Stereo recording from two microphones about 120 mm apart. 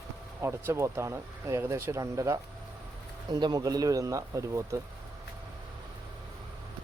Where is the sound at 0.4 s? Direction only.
20° right (ahead or behind).